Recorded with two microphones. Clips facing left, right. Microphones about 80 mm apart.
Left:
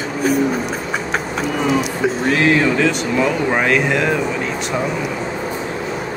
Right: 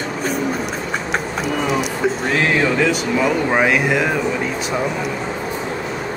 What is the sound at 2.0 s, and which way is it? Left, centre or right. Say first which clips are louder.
Speech: left 3 dB; centre.